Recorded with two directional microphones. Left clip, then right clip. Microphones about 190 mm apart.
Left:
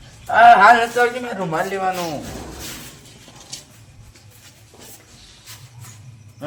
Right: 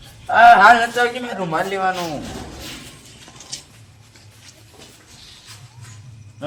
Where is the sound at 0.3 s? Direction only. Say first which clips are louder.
Even; 15° left (ahead or behind).